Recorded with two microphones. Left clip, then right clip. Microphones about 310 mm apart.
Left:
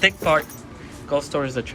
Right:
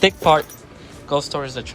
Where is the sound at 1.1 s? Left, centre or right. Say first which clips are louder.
Right 1 dB; right.